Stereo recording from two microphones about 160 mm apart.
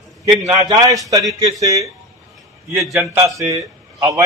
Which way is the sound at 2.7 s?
Centre (ahead or behind).